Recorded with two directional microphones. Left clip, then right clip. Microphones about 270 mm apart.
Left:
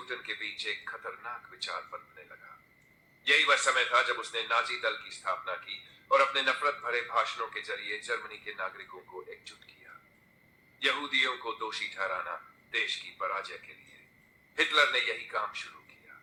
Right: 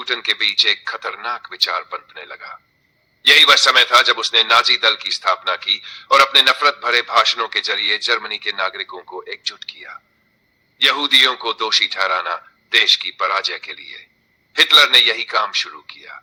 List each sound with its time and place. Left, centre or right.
0.0 s a man's voice: right